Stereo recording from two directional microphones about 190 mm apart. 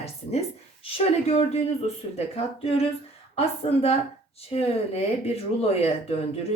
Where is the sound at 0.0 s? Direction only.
35° left (ahead or behind).